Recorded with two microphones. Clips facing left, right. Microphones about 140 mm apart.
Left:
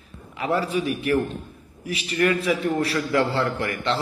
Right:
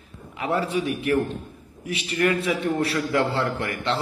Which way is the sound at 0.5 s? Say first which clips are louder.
Left 1 dB; 30° right (ahead or behind).